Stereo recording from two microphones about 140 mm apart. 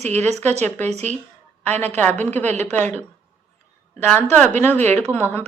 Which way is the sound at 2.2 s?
15° left (ahead or behind).